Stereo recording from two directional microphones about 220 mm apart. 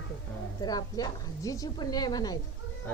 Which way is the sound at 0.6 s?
15° left (ahead or behind).